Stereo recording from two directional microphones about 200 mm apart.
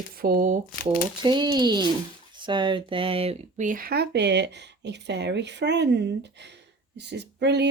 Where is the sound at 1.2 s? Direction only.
25° right (ahead or behind).